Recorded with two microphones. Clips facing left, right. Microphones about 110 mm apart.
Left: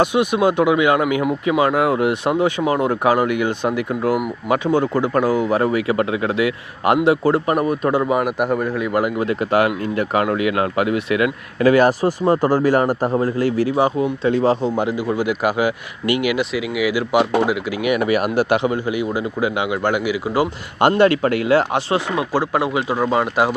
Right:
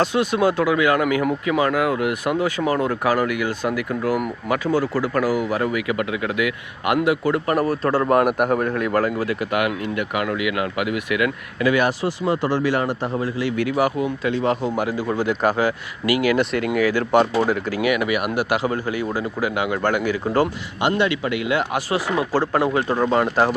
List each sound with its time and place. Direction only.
0.0 s speech: 15° left (ahead or behind)
7.5 s speech: 20° left (ahead or behind)
8.0 s a man's voice: centre (ahead or behind); by 15.0 s 20° left (ahead or behind)
15.1 s speech: 10° left (ahead or behind)
16.0 s speech: 25° left (ahead or behind)
16.3 s speech: 5° left (ahead or behind)
17.8 s speech: 30° left (ahead or behind); by 20.5 s 15° left (ahead or behind)
20.8 s a man's voice: 45° left (ahead or behind); by 22.0 s 25° left (ahead or behind)
22.2 s speech: 15° left (ahead or behind)